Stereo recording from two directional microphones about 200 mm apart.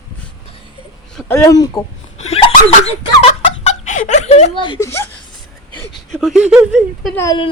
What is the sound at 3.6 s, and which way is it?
Speech, 35° left (ahead or behind).